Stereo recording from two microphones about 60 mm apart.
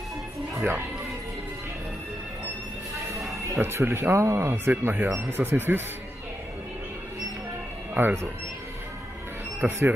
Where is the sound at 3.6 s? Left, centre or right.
Right.